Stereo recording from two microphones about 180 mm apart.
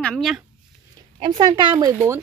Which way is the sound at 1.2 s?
25° right (ahead or behind).